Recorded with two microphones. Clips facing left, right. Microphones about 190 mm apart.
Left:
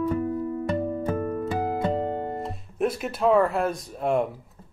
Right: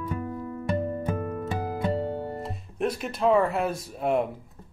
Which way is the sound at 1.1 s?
45° left (ahead or behind).